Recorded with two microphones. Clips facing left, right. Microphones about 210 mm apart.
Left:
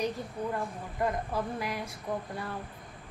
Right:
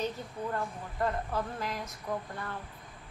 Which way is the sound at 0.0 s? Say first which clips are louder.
Left 2 dB; 15° left (ahead or behind).